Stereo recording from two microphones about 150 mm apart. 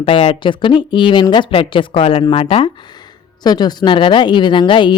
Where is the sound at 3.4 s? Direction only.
30° left (ahead or behind).